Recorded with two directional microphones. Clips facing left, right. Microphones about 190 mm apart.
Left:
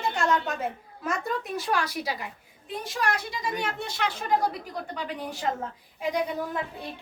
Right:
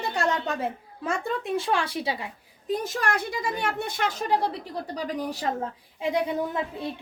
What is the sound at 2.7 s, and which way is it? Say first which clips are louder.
A woman's voice: right 3 dB; 45° right (ahead or behind).